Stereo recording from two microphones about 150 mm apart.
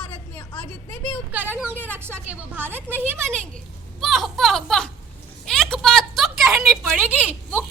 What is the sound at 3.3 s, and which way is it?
A child's voice, 5° left (ahead or behind).